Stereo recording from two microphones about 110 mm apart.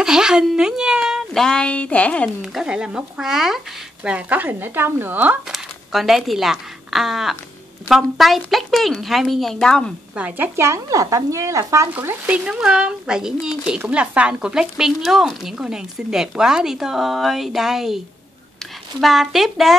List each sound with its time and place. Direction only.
0.0 s speech: 5° right (ahead or behind); by 2.3 s 10° left (ahead or behind)
2.4 s speech: 5° right (ahead or behind)
5.5 s speech: centre (ahead or behind)
10.1 s speech: 15° right (ahead or behind)
11.9 s speech: 15° right (ahead or behind)
12.4 s speech: 5° right (ahead or behind)